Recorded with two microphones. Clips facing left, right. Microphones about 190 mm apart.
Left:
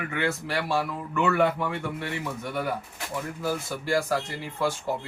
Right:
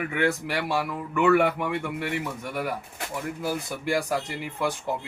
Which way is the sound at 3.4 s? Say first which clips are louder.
Left 2 dB; 15° right (ahead or behind).